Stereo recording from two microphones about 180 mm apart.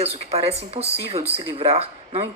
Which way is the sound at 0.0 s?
35° right (ahead or behind).